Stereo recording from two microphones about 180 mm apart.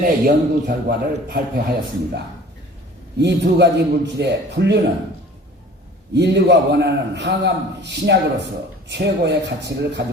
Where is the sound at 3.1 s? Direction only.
75° right (ahead or behind).